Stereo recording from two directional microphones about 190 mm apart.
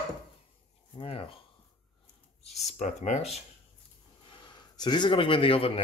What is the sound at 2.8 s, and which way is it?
Speech, 40° left (ahead or behind).